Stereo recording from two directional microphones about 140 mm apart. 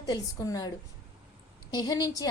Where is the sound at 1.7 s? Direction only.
30° left (ahead or behind).